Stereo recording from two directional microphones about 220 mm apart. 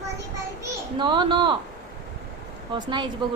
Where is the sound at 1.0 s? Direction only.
20° right (ahead or behind).